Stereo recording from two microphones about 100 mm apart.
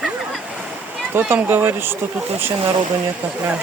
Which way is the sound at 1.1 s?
20° right (ahead or behind).